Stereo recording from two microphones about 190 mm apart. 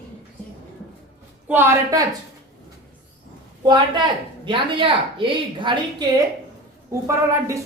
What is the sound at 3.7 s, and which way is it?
A woman's voice, 25° right (ahead or behind).